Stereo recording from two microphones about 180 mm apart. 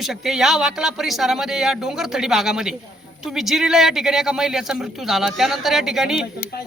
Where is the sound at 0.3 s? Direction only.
Centre (ahead or behind).